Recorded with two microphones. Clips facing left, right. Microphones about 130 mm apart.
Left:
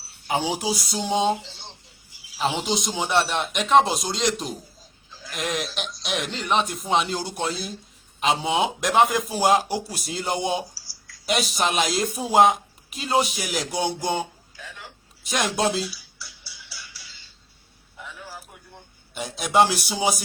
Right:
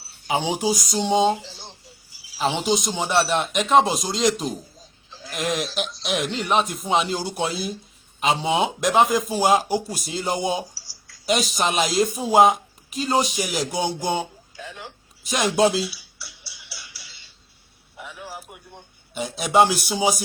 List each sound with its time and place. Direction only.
0.4 s speech: centre (ahead or behind)
2.6 s speech: centre (ahead or behind)
14.5 s a sound: 25° right (ahead or behind)
15.2 s speech: centre (ahead or behind)
16.1 s music: 75° right (ahead or behind)
17.9 s a sound: 15° right (ahead or behind)
19.1 s speech: centre (ahead or behind)